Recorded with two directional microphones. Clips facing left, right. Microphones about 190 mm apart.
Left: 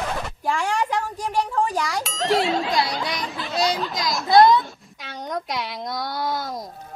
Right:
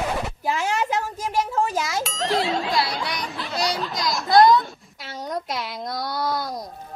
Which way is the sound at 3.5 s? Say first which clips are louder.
Left 3 dB; 20° left (ahead or behind).